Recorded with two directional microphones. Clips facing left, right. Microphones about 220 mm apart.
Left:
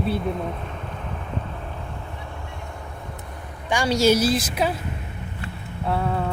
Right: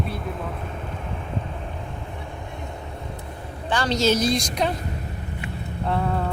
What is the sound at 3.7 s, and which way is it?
A woman's voice, 10° left (ahead or behind).